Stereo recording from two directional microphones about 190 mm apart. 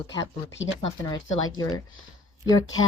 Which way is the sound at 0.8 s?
25° left (ahead or behind).